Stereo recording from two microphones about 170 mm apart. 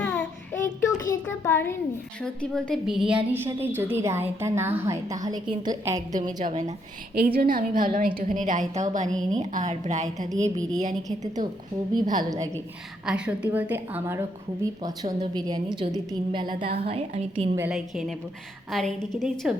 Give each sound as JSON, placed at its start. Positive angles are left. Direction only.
{"t": 0.0, "sound": "child singing", "side_deg": 5}
{"t": 0.9, "sound": "a sound", "side_deg": 20}
{"t": 2.2, "sound": "a woman's voice", "side_deg": 5}
{"t": 6.1, "sound": "a woman's voice", "side_deg": -50}
{"t": 7.3, "sound": "a woman's voice", "side_deg": -55}
{"t": 12.1, "sound": "a woman's voice", "side_deg": -20}
{"t": 13.1, "sound": "a woman's voice", "side_deg": -5}
{"t": 14.8, "sound": "a woman's voice", "side_deg": -25}
{"t": 17.7, "sound": "a woman's voice", "side_deg": -5}